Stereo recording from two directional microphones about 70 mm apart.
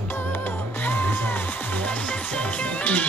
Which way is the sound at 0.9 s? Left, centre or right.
Left.